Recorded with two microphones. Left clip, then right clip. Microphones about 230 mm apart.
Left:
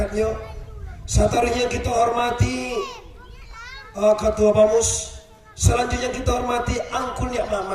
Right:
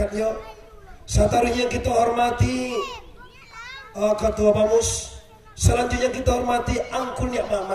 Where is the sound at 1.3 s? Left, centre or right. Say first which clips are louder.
Left 1 dB; centre.